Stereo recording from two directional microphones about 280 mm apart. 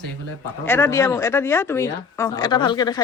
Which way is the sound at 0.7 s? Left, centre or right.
Centre.